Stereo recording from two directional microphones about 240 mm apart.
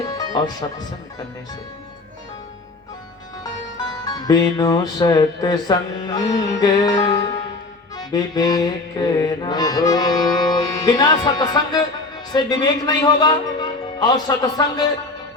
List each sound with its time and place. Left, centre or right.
0.1 s music: centre
4.0 s music: centre